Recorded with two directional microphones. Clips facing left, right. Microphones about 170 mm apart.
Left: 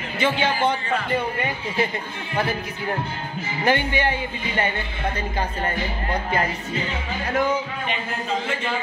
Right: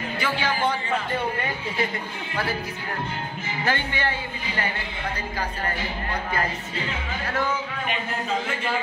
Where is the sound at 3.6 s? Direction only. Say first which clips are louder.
Left 5 dB; 15° left (ahead or behind).